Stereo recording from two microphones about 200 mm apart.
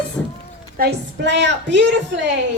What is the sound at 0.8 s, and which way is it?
A woman's voice, 60° right (ahead or behind).